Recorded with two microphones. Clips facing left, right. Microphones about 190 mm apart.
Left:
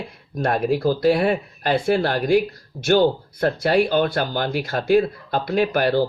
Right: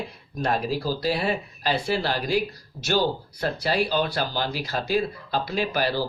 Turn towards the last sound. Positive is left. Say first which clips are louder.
# left 6 dB
turn(degrees=55)  # may be behind; listen again after turning